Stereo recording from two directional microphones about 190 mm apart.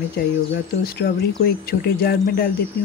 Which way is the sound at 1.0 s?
60° left (ahead or behind).